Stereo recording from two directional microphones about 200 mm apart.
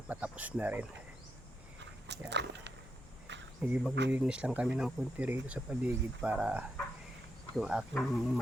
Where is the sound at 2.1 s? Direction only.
60° right (ahead or behind).